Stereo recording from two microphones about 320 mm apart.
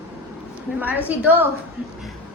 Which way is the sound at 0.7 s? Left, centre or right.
Centre.